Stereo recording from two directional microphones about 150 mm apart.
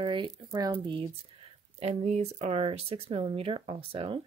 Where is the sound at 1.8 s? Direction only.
45° right (ahead or behind).